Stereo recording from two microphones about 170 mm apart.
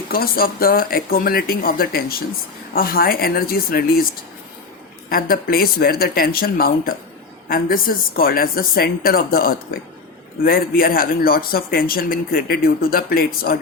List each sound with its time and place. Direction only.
0.1 s a man's voice: 60° left (ahead or behind)
5.0 s a man's voice: 60° left (ahead or behind)